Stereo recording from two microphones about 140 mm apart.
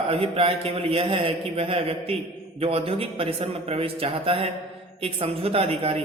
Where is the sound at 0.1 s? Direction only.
45° right (ahead or behind).